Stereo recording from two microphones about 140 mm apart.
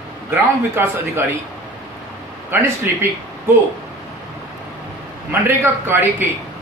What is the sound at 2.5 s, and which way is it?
Speech, 15° right (ahead or behind).